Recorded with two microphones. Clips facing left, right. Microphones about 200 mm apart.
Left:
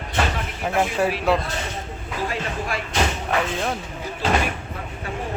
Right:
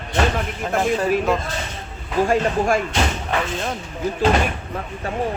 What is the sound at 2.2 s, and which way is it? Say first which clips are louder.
Speech: right 10 dB; 50° right (ahead or behind).